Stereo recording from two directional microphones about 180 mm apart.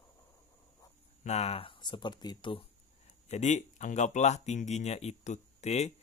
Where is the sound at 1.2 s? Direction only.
40° left (ahead or behind).